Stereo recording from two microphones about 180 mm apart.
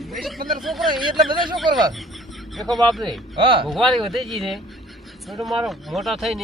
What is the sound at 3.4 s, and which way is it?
Speech, 30° right (ahead or behind).